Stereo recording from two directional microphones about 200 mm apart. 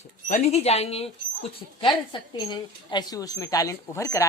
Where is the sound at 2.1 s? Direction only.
25° left (ahead or behind).